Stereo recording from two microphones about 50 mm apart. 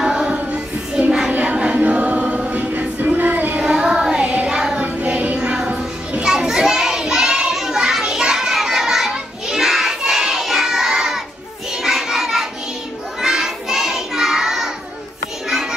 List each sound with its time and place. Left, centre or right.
0.0 s choir: centre
0.5 s child singing: right
1.3 s choir: right
3.0 s child singing: right
3.5 s child singing: centre
5.0 s child singing: right
5.7 s a sound: centre
13.2 s child singing: centre